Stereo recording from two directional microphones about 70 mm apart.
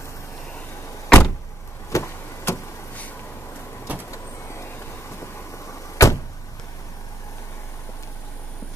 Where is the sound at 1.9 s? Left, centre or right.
Left.